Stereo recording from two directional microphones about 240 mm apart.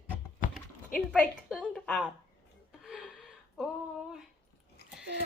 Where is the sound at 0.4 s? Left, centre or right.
Left.